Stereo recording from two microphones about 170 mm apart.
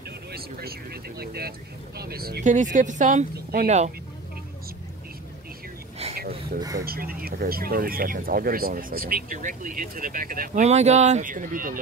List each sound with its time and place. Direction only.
0.3 s vehicle: 65° right (ahead or behind)
2.0 s speech: 65° right (ahead or behind)
2.4 s speech: 45° right (ahead or behind)
6.6 s speech: 20° right (ahead or behind)
6.9 s speech: 60° right (ahead or behind)
10.6 s speech: 40° right (ahead or behind)